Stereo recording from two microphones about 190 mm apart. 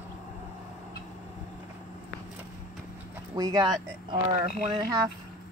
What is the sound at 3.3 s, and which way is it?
Speech, 20° right (ahead or behind).